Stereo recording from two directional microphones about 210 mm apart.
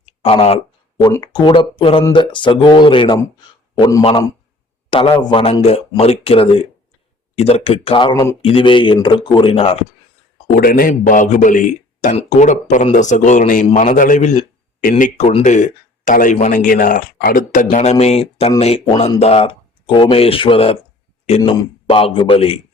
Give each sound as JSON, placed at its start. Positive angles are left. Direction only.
{"t": 0.0, "sound": "a sound", "side_deg": 25}
{"t": 0.9, "sound": "a man's voice", "side_deg": 20}
{"t": 10.5, "sound": "a man's voice", "side_deg": 45}